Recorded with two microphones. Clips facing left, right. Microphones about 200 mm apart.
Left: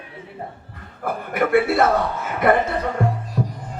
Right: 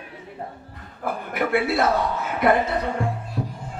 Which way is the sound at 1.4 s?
50° left (ahead or behind).